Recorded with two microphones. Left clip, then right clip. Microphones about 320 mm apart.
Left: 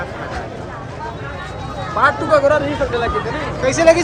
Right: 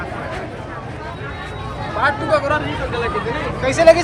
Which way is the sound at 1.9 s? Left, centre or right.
Left.